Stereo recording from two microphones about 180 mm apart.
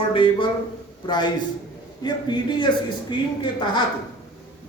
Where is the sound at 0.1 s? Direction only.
30° left (ahead or behind).